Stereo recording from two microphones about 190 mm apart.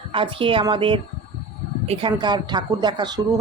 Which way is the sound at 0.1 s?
25° right (ahead or behind).